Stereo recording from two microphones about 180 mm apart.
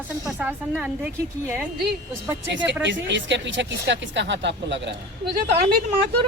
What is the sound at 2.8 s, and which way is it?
Speech, 85° right.